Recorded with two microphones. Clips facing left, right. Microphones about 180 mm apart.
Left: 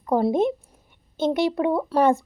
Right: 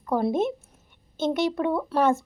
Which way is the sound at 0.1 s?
15° left (ahead or behind).